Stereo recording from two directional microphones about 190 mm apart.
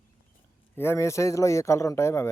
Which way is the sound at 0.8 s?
15° left (ahead or behind).